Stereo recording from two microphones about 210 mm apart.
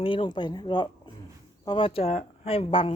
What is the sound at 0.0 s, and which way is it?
Speech, 25° left (ahead or behind).